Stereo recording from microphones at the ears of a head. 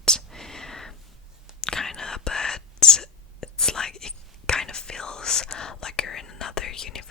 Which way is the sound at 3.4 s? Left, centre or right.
Left.